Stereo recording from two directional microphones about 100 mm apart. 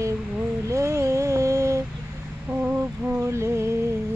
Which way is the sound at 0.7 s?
30° right (ahead or behind).